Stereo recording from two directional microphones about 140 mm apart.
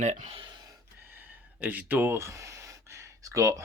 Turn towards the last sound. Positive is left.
turn(degrees=-25)  # may be behind; listen again after turning